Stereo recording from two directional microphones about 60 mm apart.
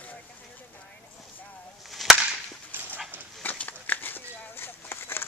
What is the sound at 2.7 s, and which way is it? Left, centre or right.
Dog, right.